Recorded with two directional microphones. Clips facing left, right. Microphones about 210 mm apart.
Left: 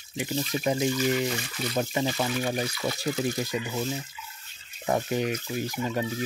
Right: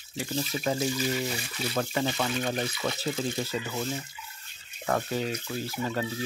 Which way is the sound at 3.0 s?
15° left (ahead or behind).